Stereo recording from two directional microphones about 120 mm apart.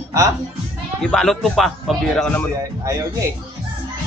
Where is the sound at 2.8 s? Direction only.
25° right (ahead or behind).